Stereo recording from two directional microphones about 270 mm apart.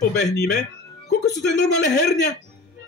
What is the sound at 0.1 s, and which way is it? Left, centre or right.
Speech, left.